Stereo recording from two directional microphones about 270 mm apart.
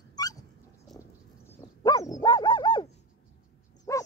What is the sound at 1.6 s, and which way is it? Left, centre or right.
Dog, centre.